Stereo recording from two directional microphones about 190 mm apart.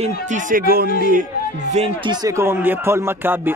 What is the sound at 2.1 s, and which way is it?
Speech, 20° right (ahead or behind).